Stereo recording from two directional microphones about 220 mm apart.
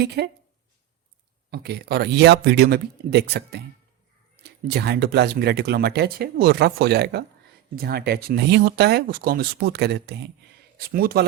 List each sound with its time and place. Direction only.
0.2 s speech: 45° right (ahead or behind)
1.5 s speech: 45° right (ahead or behind)